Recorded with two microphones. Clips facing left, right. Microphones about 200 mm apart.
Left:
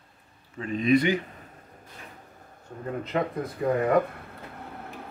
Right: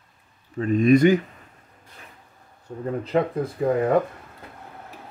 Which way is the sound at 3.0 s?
30° right (ahead or behind).